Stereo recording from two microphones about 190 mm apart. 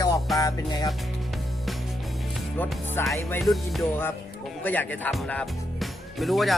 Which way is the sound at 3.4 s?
Centre (ahead or behind).